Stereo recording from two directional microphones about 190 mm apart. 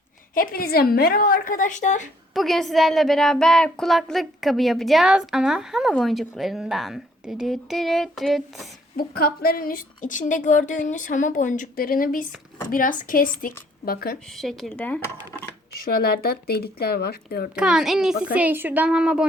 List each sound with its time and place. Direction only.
0.3 s a woman's voice: 50° left (ahead or behind)
2.3 s a woman's voice: centre (ahead or behind)
9.0 s a woman's voice: 50° left (ahead or behind)
14.3 s a woman's voice: centre (ahead or behind)
15.7 s speech: 55° left (ahead or behind)
17.5 s a woman's voice: 5° right (ahead or behind)